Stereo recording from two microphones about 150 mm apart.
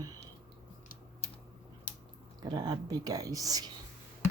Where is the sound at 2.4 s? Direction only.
25° right (ahead or behind).